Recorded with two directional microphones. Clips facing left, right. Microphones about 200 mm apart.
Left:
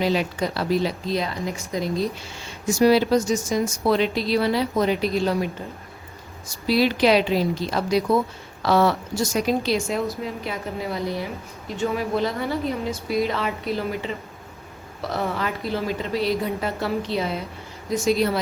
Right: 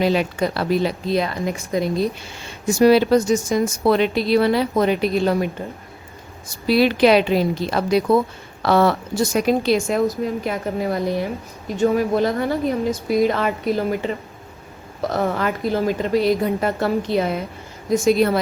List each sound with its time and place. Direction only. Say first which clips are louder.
0.0 s speech: right 4 dB; 55° right (ahead or behind)
6.5 s a woman's voice: right 4 dB; 60° right (ahead or behind)
15.1 s a woman's voice: right 4 dB; 50° right (ahead or behind)